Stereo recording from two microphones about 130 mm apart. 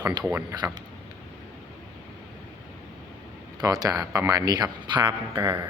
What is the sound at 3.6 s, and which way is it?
A man's voice, 30° right (ahead or behind).